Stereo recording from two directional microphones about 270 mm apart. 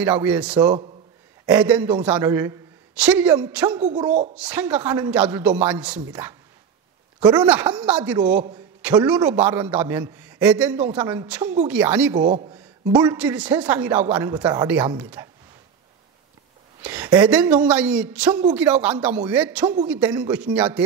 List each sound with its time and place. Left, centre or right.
0.0 s a man's voice: centre
3.8 s a man's voice: centre
4.4 s a man's voice: centre
7.2 s a man's voice: centre
7.4 s a man's voice: centre
12.2 s a man's voice: centre
16.8 s a man's voice: centre